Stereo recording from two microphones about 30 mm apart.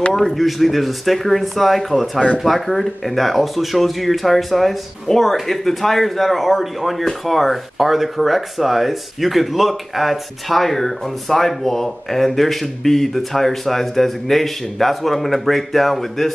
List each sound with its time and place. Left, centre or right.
0.1 s speech: centre
0.4 s speech: centre